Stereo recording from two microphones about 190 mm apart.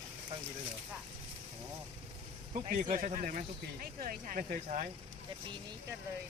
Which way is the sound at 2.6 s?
35° right (ahead or behind).